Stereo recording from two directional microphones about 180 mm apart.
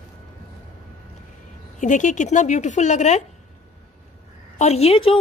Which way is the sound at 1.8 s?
45° left (ahead or behind).